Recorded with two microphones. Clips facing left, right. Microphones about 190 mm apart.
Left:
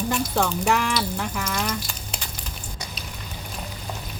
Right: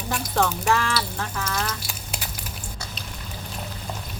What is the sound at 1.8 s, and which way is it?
Duck, 5° right (ahead or behind).